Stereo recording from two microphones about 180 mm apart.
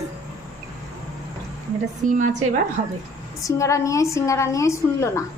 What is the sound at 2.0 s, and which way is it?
Speech, 45° right (ahead or behind).